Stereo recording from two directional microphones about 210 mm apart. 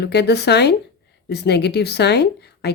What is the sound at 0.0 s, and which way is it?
A woman's voice, 50° left (ahead or behind).